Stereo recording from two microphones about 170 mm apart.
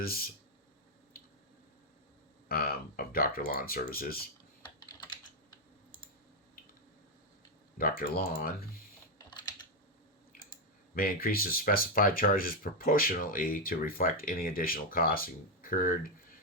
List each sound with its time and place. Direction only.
0.0 s speech: 60° left (ahead or behind)
2.5 s speech: 60° left (ahead or behind)
4.6 s typing: 25° left (ahead or behind)
7.8 s speech: 60° left (ahead or behind)
10.9 s speech: 60° left (ahead or behind)